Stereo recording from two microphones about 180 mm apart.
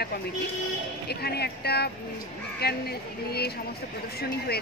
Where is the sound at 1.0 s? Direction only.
65° left (ahead or behind).